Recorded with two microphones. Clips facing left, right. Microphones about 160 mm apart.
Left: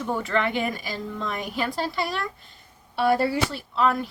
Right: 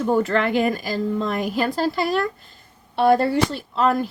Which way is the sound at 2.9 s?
55° right (ahead or behind).